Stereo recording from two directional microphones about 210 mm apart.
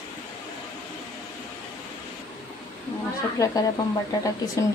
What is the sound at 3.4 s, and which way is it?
Speech, 15° left (ahead or behind).